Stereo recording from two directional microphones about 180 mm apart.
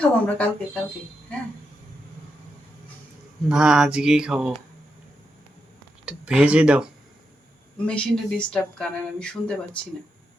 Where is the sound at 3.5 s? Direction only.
5° right (ahead or behind).